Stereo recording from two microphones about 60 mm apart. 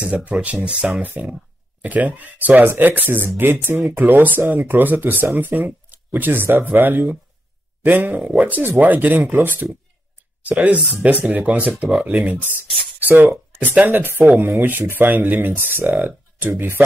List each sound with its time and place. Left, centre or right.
0.0 s speech: right
10.4 s speech: right